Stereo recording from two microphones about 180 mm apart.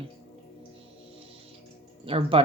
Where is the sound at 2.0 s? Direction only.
30° right (ahead or behind).